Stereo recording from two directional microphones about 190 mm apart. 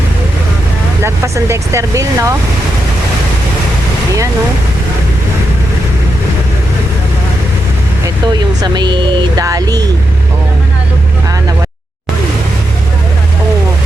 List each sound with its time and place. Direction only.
1.0 s speech: 15° right (ahead or behind)
8.0 s speech: 20° right (ahead or behind)